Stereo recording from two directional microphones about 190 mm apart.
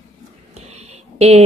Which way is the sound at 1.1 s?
35° right (ahead or behind).